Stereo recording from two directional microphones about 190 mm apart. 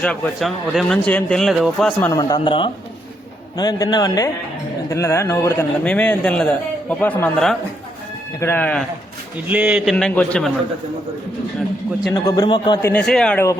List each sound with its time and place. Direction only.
0.0 s a man's voice: 5° left (ahead or behind)
2.0 s a man's voice: 20° left (ahead or behind)
9.5 s speech: 5° right (ahead or behind)
9.9 s a man's voice: 5° left (ahead or behind)
12.1 s a man's voice: 20° left (ahead or behind)
12.9 s a man's voice: 5° left (ahead or behind)